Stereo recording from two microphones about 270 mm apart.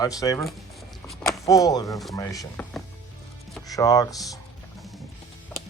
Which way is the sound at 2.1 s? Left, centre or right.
Centre.